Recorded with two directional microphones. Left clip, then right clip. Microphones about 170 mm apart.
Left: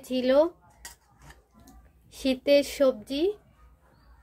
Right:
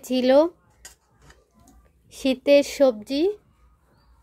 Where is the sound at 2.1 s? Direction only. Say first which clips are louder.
Right 4 dB; 40° right (ahead or behind).